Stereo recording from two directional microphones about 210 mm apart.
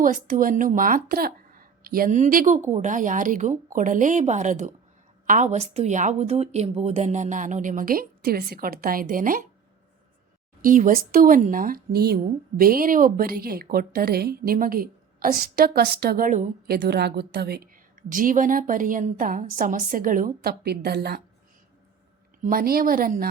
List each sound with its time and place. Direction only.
0.0 s a woman's voice: 40° right (ahead or behind)
10.6 s a woman's voice: 40° right (ahead or behind)
22.4 s speech: 45° right (ahead or behind)